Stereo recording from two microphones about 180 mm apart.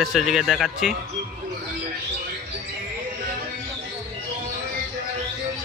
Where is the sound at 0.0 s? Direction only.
Centre (ahead or behind).